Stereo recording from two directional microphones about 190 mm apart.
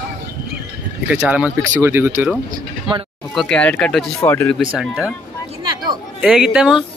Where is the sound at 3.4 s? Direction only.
5° left (ahead or behind).